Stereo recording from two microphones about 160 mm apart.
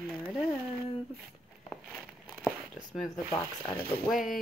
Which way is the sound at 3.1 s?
20° left (ahead or behind).